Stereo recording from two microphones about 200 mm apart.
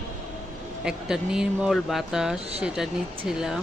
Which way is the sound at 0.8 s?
5° right (ahead or behind).